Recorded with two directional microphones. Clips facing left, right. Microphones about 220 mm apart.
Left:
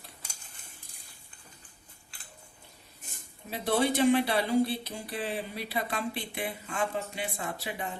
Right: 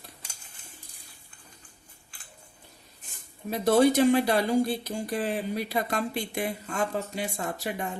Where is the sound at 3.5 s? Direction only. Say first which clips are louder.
Right 7 dB; 45° right (ahead or behind).